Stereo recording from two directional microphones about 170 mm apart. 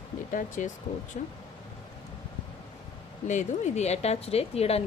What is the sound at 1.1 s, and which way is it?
Speech, 45° left (ahead or behind).